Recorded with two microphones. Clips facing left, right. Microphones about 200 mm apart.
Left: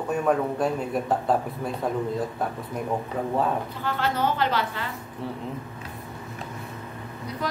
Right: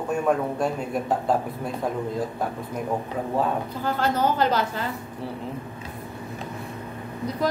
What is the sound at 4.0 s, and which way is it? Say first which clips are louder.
Speech: right 2 dB; 40° right (ahead or behind).